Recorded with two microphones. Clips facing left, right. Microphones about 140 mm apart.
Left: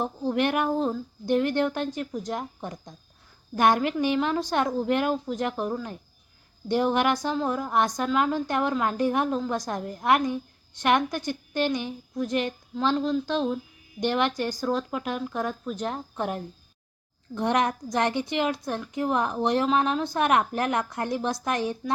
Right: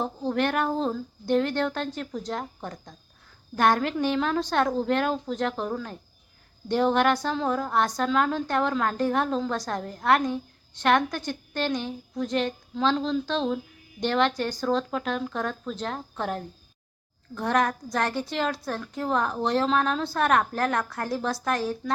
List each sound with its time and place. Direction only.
0.3 s a woman's voice: 15° left (ahead or behind)